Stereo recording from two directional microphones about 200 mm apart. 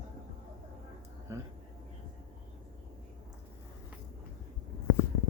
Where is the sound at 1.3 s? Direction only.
15° right (ahead or behind).